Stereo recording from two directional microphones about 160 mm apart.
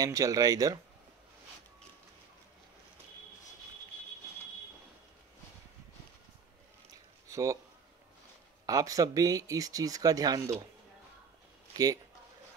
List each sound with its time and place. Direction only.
0.0 s speech: 20° right (ahead or behind)
7.2 s a sound: 20° right (ahead or behind)
8.6 s speech: 20° right (ahead or behind)
11.7 s speech: 25° right (ahead or behind)